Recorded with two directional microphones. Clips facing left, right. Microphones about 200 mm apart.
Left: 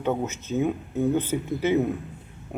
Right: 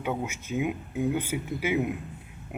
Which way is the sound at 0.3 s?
10° right (ahead or behind).